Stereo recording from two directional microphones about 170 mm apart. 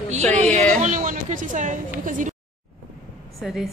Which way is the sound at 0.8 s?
50° right (ahead or behind).